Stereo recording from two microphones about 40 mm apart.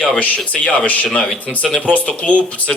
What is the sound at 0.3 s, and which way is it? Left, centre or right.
Speech, left.